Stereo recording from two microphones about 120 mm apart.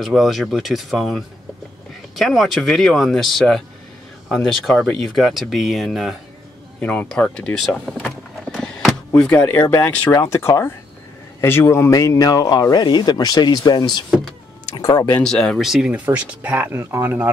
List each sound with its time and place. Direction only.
0.0 s speech: centre (ahead or behind)
6.8 s speech: 10° left (ahead or behind)
15.2 s speech: 5° left (ahead or behind); by 17.3 s 20° right (ahead or behind)